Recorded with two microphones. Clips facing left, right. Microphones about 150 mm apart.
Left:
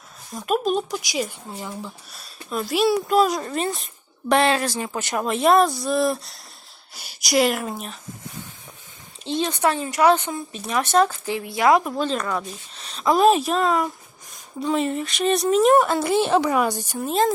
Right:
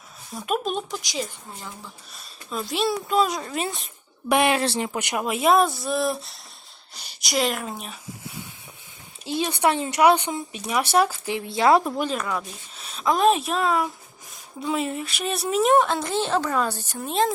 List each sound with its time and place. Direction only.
0.3 s speech: centre (ahead or behind)
4.3 s speech: 15° right (ahead or behind)
4.6 s speech: 30° right (ahead or behind)
4.9 s speech: 10° right (ahead or behind)
9.2 s speech: 10° right (ahead or behind)
11.3 s speech: 25° right (ahead or behind)
11.9 s speech: 10° right (ahead or behind); by 17.0 s 10° left (ahead or behind)
17.0 s speech: centre (ahead or behind)